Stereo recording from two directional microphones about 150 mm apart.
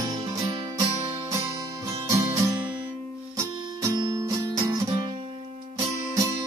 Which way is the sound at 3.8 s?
25° right (ahead or behind).